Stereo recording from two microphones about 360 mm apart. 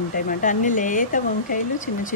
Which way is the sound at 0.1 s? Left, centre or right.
Left.